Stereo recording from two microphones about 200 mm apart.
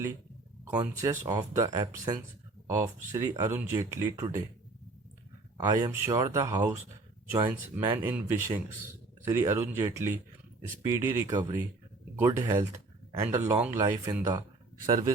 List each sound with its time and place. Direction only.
0.8 s speech: 15° right (ahead or behind)
5.5 s speech: 20° right (ahead or behind)